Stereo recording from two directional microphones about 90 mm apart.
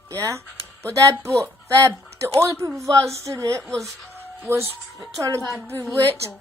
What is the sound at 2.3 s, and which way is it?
A woman's voice, 30° right (ahead or behind).